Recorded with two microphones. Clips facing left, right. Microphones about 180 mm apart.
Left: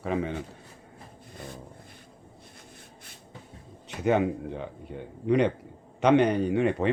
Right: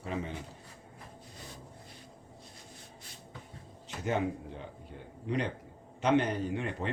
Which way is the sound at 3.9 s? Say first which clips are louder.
Left 8 dB; 65° left (ahead or behind).